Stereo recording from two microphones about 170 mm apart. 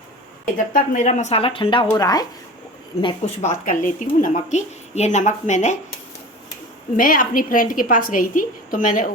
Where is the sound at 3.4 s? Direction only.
50° left (ahead or behind).